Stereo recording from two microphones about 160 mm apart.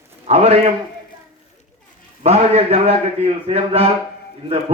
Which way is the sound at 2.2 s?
45° right (ahead or behind).